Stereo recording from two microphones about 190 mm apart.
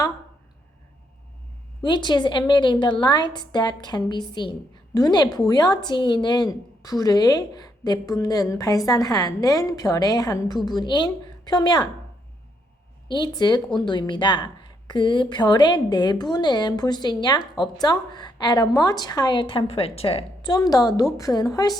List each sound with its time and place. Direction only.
1.8 s speech: 25° left (ahead or behind)
13.1 s speech: 20° left (ahead or behind)